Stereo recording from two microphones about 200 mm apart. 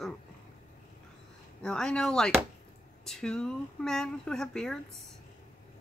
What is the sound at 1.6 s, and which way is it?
Speech, 5° left (ahead or behind).